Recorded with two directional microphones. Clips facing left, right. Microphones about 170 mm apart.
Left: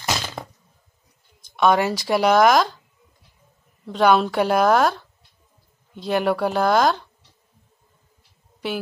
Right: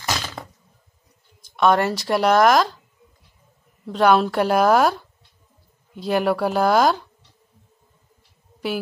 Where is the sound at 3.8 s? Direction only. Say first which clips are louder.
Even; centre (ahead or behind).